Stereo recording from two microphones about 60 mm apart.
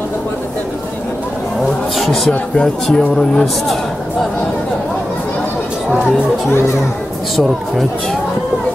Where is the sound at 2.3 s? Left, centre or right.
Centre.